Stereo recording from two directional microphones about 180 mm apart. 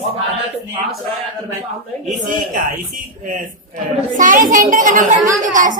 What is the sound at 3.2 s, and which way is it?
A woman's voice, 45° right (ahead or behind).